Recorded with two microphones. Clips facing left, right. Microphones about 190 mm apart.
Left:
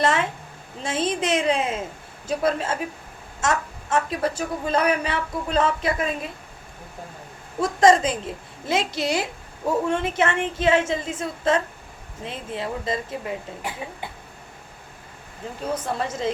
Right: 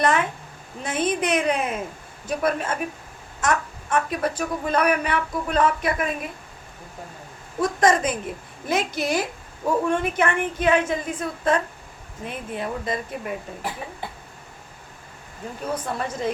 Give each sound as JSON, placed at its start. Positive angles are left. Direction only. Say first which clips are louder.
{"t": 0.0, "sound": "a woman's voice", "louder": "right 1 dB", "side_deg": 25}
{"t": 7.6, "sound": "a woman's voice", "louder": "left 3 dB", "side_deg": 25}
{"t": 15.6, "sound": "a woman's voice", "louder": "left 1 dB", "side_deg": 25}